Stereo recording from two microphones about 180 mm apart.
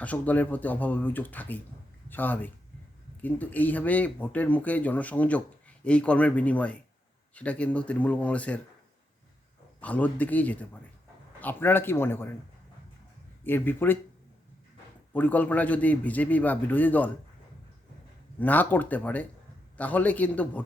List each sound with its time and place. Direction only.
0.0 s speech: 10° left (ahead or behind)
9.8 s speech: 10° left (ahead or behind)
13.4 s speech: 10° left (ahead or behind)
15.1 s speech: 10° left (ahead or behind)
18.3 s speech: 10° left (ahead or behind)